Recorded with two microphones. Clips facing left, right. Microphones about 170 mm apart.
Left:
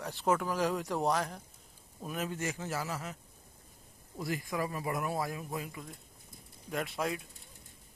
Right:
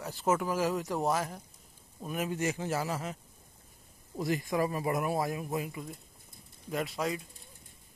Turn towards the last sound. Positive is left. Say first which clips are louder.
# right 2 dB
turn(degrees=0)  # may be behind; listen again after turning